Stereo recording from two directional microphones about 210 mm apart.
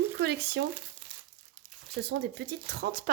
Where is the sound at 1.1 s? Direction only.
20° right (ahead or behind).